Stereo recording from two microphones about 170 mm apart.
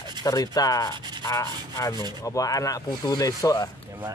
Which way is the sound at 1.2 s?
20° left (ahead or behind).